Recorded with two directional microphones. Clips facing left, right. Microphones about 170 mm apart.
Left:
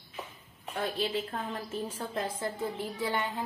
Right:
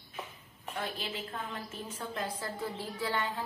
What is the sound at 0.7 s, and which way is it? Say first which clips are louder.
A woman's voice: left 7 dB; 35° left (ahead or behind).